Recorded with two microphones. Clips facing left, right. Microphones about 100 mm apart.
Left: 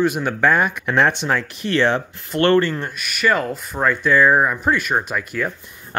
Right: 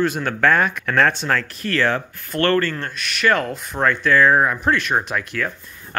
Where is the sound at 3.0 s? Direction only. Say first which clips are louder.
Right 1 dB; 5° left (ahead or behind).